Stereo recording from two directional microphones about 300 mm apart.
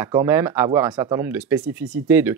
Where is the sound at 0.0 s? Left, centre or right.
Centre.